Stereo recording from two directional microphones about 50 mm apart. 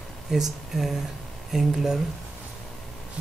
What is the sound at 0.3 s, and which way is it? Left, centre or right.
Speech, centre.